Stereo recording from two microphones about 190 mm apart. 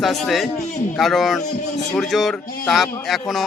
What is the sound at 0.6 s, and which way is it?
Speech, 40° left (ahead or behind).